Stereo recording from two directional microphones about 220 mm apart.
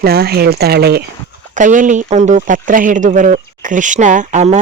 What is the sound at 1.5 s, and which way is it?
Speech, 35° right (ahead or behind).